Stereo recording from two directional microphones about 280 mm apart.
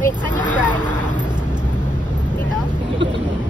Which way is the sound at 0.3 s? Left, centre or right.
Left.